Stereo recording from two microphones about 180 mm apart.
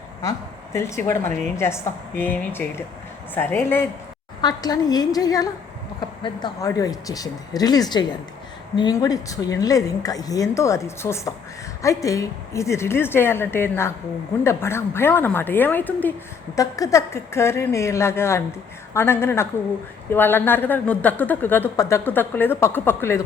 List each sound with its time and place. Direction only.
0.2 s a woman's voice: 15° left (ahead or behind)